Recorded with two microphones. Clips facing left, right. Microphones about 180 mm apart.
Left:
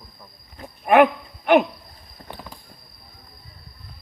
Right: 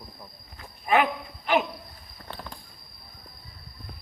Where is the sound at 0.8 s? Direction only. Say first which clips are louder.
Left 8 dB; 60° left (ahead or behind).